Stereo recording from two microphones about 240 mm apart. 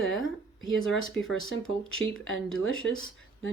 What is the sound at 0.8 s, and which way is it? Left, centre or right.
Speech, centre.